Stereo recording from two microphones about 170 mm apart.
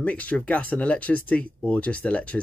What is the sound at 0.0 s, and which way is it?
Speech, 10° left (ahead or behind).